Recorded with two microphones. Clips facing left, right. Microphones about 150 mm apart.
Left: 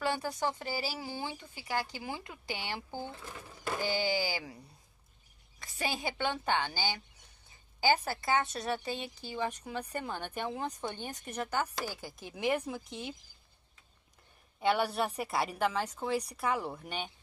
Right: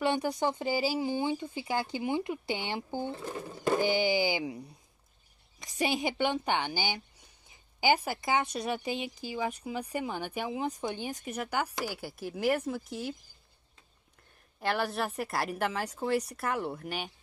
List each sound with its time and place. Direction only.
0.0 s a sound: 20° right (ahead or behind)
0.4 s speech: 20° right (ahead or behind)
5.6 s speech: 15° right (ahead or behind); by 13.1 s centre (ahead or behind)
14.6 s a woman's voice: centre (ahead or behind)